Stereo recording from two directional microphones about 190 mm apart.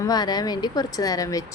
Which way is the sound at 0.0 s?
20° left (ahead or behind).